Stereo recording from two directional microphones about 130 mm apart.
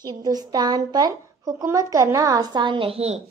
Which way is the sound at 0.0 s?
30° right (ahead or behind).